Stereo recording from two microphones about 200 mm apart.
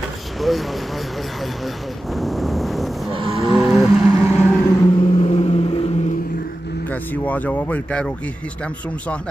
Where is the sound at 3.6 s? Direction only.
5° right (ahead or behind).